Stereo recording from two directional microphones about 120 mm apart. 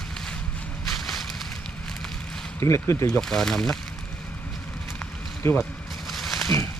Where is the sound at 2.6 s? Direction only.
25° left (ahead or behind).